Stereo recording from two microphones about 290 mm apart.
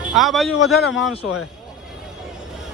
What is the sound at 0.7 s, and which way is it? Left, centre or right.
Speech, left.